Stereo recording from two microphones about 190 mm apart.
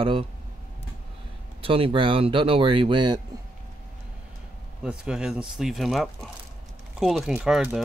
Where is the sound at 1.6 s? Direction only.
30° right (ahead or behind).